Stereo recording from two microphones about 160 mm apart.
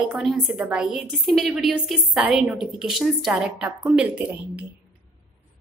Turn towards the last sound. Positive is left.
turn(degrees=-10)  # may be behind; listen again after turning